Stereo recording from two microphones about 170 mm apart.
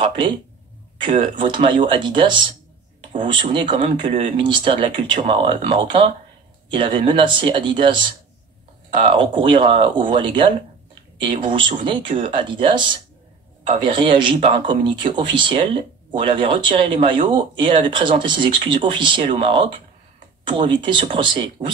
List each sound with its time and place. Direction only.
1.1 s speech: 30° right (ahead or behind)